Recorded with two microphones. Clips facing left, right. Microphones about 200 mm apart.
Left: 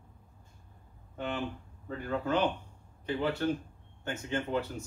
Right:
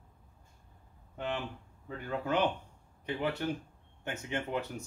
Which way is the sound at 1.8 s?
15° right (ahead or behind).